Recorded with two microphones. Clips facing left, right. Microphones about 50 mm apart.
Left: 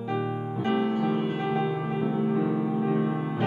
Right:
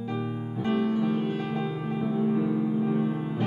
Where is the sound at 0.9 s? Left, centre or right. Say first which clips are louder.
Even; left.